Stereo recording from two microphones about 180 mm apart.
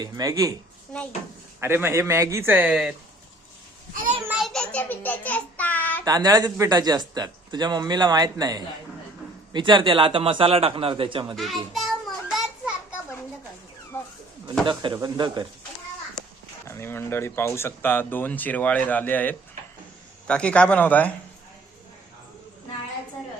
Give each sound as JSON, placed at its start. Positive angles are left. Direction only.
{"t": 0.0, "sound": "speech", "side_deg": -20}
{"t": 1.6, "sound": "a man's voice", "side_deg": -15}
{"t": 4.3, "sound": "child singing", "side_deg": 0}
{"t": 6.1, "sound": "speech", "side_deg": -20}
{"t": 11.3, "sound": "children playing", "side_deg": 0}
{"t": 13.9, "sound": "a sound", "side_deg": 10}
{"t": 14.7, "sound": "speech", "side_deg": -25}
{"t": 16.6, "sound": "speech", "side_deg": 15}